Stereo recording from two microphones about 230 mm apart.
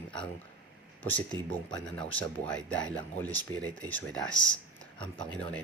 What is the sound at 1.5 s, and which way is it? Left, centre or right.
Speech, centre.